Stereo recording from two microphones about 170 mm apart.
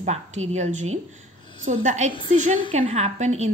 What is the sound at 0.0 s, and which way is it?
A woman's voice, 40° right (ahead or behind).